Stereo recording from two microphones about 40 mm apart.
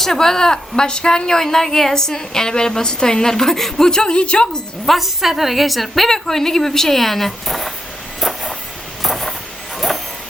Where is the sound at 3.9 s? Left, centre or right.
Left.